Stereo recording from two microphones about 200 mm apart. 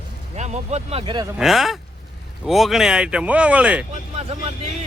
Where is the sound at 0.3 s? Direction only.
35° right (ahead or behind).